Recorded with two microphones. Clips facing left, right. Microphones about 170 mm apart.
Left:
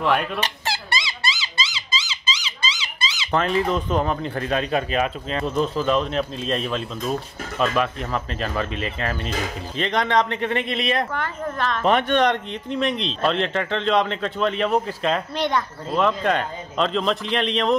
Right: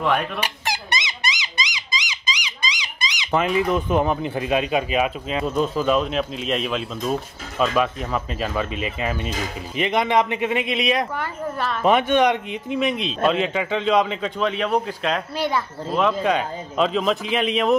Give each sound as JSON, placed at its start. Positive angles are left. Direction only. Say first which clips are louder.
{"t": 0.0, "sound": "speech", "louder": "even", "side_deg": 0}
{"t": 0.4, "sound": "squeak", "louder": "even", "side_deg": -15}
{"t": 3.3, "sound": "speech", "louder": "right 1 dB", "side_deg": -10}